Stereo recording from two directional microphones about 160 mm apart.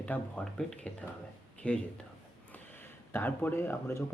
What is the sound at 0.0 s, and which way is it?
Speech, 10° left (ahead or behind).